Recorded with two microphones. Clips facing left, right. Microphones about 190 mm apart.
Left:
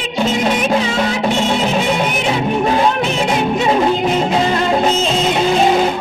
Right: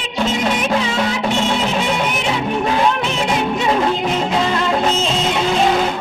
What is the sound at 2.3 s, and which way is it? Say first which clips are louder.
Music: left 4 dB; 40° left (ahead or behind).